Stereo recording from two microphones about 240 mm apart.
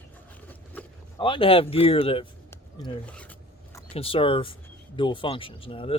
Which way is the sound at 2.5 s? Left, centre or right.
Centre.